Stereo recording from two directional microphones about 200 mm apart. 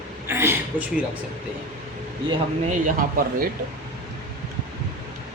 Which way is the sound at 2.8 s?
45° right (ahead or behind).